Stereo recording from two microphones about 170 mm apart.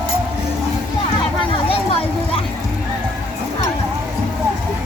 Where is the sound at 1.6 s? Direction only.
35° left (ahead or behind).